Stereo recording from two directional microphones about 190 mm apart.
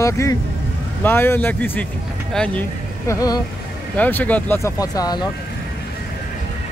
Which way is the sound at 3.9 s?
10° left (ahead or behind).